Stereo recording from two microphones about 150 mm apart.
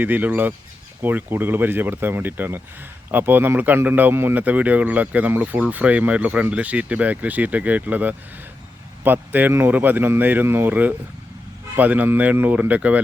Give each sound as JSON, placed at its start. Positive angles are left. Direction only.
{"t": 0.0, "sound": "speech", "side_deg": -10}